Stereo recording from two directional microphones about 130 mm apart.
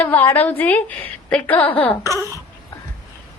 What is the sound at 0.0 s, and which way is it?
A woman's voice, 15° left (ahead or behind).